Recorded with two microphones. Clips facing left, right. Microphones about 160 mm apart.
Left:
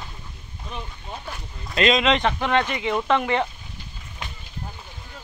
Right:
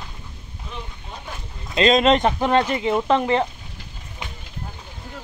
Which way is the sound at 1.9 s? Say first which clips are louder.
Right 5 dB; 45° right (ahead or behind).